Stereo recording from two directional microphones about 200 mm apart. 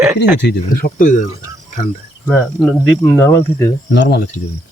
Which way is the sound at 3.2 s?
10° left (ahead or behind).